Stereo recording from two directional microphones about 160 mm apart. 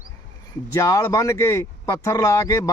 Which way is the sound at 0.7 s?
20° left (ahead or behind).